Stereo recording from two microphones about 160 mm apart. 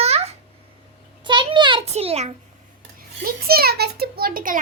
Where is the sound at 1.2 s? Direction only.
30° right (ahead or behind).